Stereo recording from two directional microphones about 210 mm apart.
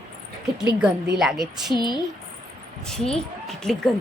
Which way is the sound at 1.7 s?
20° left (ahead or behind).